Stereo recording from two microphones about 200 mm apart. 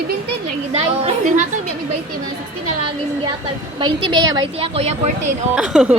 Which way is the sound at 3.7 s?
25° right (ahead or behind).